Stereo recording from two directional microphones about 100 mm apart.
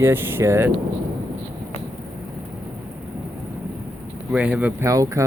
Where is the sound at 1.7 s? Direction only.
90° left.